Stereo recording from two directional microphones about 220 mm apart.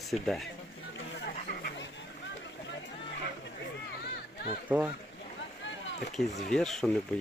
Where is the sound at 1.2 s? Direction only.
45° left (ahead or behind).